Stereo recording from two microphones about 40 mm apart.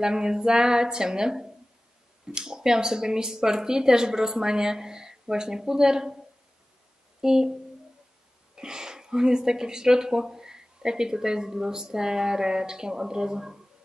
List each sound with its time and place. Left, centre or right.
0.0 s speech: centre
7.2 s speech: centre
8.5 s speech: centre